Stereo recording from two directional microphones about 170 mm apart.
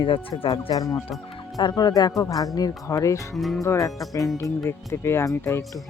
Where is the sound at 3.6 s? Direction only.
20° left (ahead or behind).